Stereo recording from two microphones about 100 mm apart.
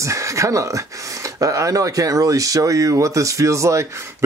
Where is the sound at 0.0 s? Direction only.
30° right (ahead or behind).